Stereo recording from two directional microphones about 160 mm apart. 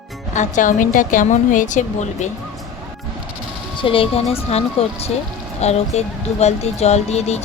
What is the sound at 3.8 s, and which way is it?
A woman's voice, 35° left (ahead or behind).